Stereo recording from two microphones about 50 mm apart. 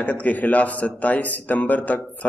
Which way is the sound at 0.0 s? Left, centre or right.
Left.